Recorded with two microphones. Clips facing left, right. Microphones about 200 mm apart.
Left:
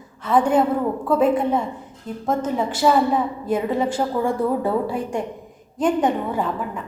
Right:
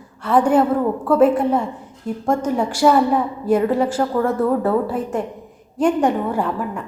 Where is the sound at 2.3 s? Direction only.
10° right (ahead or behind).